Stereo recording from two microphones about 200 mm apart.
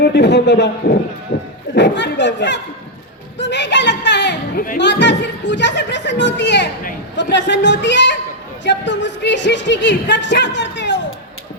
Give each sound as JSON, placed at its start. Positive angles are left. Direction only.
{"t": 0.0, "sound": "music", "side_deg": 60}
{"t": 3.3, "sound": "speech", "side_deg": 60}
{"t": 4.5, "sound": "speech", "side_deg": 45}
{"t": 4.8, "sound": "music", "side_deg": 60}